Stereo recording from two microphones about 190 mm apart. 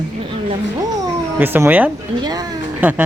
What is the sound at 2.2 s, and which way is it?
Speech, 20° right (ahead or behind).